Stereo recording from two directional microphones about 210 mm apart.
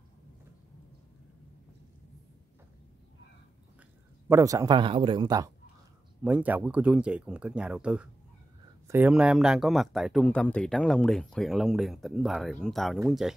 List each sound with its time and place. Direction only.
4.3 s a man's voice: 15° right (ahead or behind)
6.2 s speech: 5° right (ahead or behind)